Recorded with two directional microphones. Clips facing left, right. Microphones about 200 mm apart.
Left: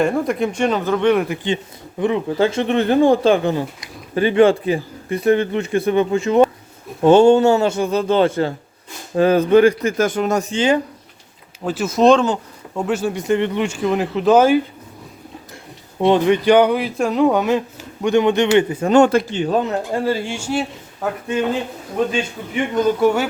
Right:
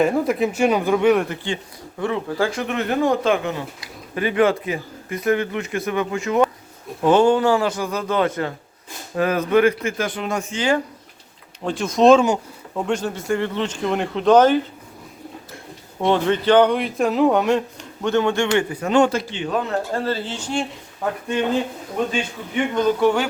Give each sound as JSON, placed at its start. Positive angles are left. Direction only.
{"t": 0.0, "sound": "speech", "side_deg": -5}
{"t": 2.0, "sound": "speech", "side_deg": 20}
{"t": 11.6, "sound": "a man's voice", "side_deg": 5}
{"t": 13.2, "sound": "a man's voice", "side_deg": 20}
{"t": 16.0, "sound": "speech", "side_deg": 15}
{"t": 18.0, "sound": "a man's voice", "side_deg": 15}
{"t": 18.9, "sound": "speech", "side_deg": 50}
{"t": 19.4, "sound": "speech", "side_deg": 30}
{"t": 19.6, "sound": "a man's voice", "side_deg": 15}
{"t": 22.7, "sound": "a man's voice", "side_deg": 10}